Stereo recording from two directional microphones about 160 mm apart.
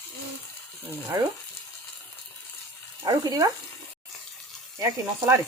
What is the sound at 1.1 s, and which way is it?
Speech, 20° right (ahead or behind).